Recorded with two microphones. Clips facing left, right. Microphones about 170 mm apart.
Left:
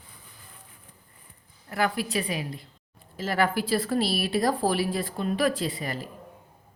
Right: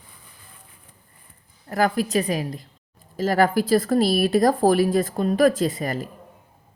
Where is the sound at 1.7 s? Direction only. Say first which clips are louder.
Right 6 dB; 40° right (ahead or behind).